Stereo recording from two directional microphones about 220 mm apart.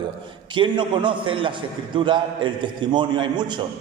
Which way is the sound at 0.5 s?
20° right (ahead or behind).